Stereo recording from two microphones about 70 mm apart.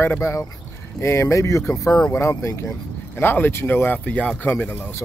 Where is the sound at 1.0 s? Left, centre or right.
Left.